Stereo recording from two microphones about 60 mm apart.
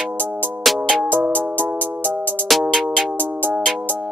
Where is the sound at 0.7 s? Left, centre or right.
Centre.